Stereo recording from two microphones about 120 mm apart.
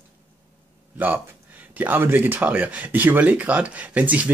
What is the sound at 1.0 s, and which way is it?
Speech, 15° right (ahead or behind).